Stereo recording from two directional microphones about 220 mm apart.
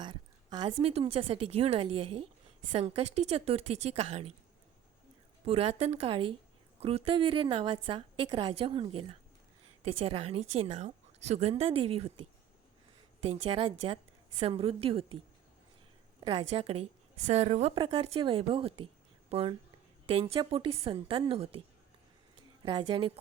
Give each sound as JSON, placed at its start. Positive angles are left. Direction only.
{"t": 0.0, "sound": "a woman's voice", "side_deg": -20}
{"t": 5.5, "sound": "a woman's voice", "side_deg": -25}
{"t": 16.2, "sound": "a woman's voice", "side_deg": -25}
{"t": 22.6, "sound": "a woman's voice", "side_deg": -20}